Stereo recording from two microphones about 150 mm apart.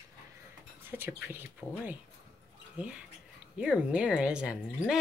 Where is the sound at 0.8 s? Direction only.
15° right (ahead or behind).